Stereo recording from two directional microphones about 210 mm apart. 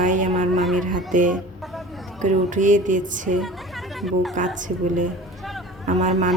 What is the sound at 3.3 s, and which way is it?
Speech, centre (ahead or behind).